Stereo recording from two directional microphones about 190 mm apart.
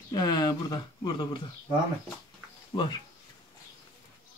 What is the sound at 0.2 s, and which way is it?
Speech, 20° left (ahead or behind).